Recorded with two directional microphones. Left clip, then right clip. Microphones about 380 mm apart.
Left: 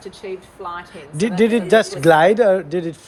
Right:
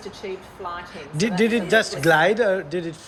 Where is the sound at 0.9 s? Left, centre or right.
Centre.